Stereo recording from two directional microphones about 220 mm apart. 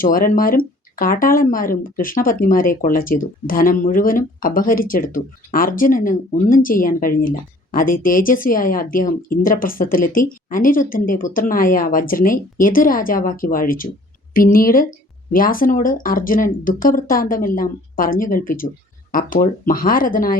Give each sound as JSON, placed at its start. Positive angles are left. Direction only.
{"t": 0.0, "sound": "speech", "side_deg": 40}